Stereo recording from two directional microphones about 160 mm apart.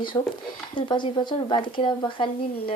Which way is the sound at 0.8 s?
30° left (ahead or behind).